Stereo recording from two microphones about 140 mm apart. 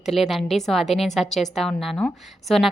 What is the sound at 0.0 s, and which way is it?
A woman's voice, centre (ahead or behind).